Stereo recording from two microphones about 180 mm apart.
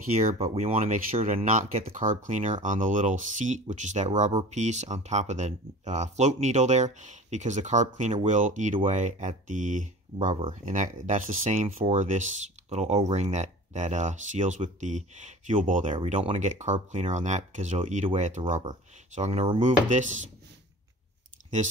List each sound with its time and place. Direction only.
0.1 s speech: 35° right (ahead or behind)